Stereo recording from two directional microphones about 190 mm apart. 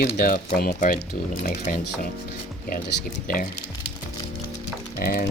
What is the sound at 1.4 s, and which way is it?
Speech, 40° left (ahead or behind).